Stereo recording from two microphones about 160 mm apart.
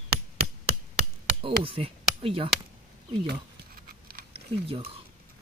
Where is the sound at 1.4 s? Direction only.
35° right (ahead or behind).